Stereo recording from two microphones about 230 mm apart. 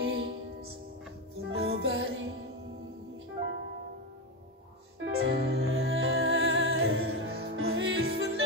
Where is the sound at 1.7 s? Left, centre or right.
Right.